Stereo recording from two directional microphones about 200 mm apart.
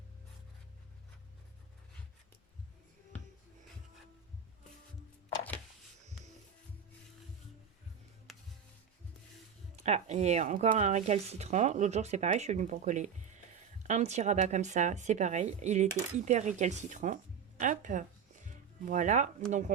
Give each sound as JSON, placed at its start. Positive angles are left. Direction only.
{"t": 8.3, "sound": "music", "side_deg": 0}
{"t": 9.7, "sound": "speech", "side_deg": -35}